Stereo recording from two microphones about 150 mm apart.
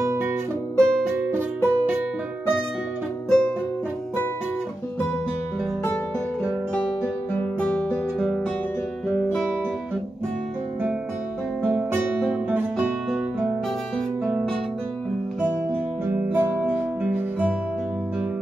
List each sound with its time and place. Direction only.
0.0 s music: 15° right (ahead or behind)
0.7 s music: 5° left (ahead or behind)
1.2 s music: 15° right (ahead or behind)
3.3 s music: 5° left (ahead or behind)
7.3 s music: 10° left (ahead or behind)
11.6 s guitar: 10° right (ahead or behind)
14.2 s music: centre (ahead or behind)
16.1 s music: 15° right (ahead or behind)